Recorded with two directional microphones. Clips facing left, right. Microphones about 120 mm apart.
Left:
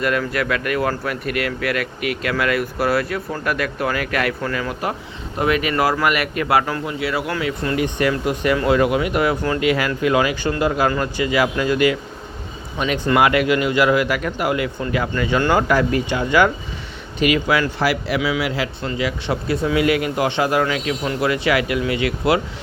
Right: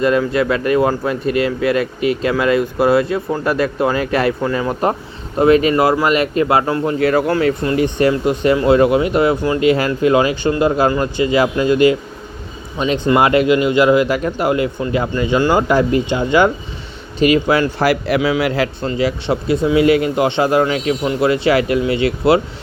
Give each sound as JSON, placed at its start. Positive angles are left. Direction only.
{"t": 0.0, "sound": "speech", "side_deg": -25}
{"t": 4.7, "sound": "speech", "side_deg": -40}
{"t": 6.8, "sound": "speech", "side_deg": -45}
{"t": 7.6, "sound": "speech", "side_deg": -30}
{"t": 9.6, "sound": "speech", "side_deg": -30}
{"t": 15.4, "sound": "speech", "side_deg": -10}
{"t": 15.6, "sound": "speech", "side_deg": -25}
{"t": 18.8, "sound": "speech", "side_deg": -35}